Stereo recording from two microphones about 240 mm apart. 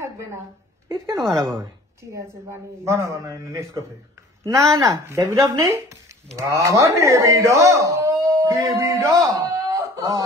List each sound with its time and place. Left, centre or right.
0.8 s speech: centre